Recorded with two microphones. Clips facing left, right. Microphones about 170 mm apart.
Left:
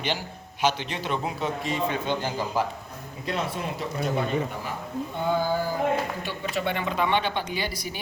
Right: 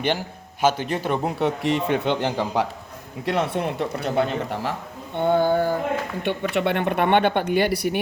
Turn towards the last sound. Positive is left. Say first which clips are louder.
# right 11 dB
turn(degrees=-65)  # may be behind; listen again after turning